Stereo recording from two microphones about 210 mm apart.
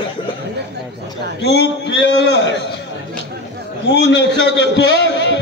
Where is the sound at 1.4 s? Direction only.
55° left (ahead or behind).